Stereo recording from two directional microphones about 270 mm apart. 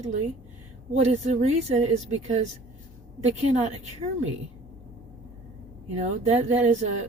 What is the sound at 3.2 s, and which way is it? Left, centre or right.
Speech, right.